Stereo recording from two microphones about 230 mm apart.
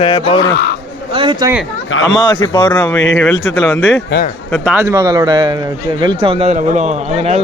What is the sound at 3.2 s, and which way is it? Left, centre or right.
Speech, centre.